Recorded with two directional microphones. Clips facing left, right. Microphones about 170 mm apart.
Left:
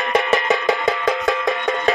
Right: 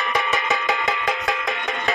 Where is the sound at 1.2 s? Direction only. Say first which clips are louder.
Left 6 dB; 40° left (ahead or behind).